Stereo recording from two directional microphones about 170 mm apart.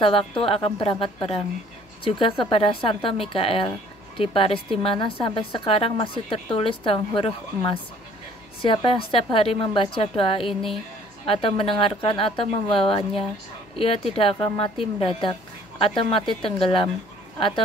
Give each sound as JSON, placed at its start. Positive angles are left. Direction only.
{"t": 0.0, "sound": "a woman's voice", "side_deg": 30}